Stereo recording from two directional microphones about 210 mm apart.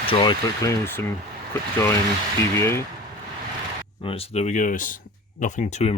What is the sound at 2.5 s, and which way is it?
Speech, 10° left (ahead or behind).